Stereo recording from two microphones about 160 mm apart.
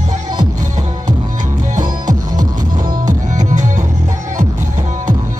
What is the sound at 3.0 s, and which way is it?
Music, 50° right (ahead or behind).